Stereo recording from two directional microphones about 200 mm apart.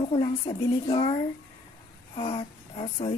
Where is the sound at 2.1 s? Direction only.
25° left (ahead or behind).